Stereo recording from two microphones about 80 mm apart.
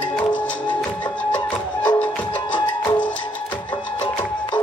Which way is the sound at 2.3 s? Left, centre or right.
Left.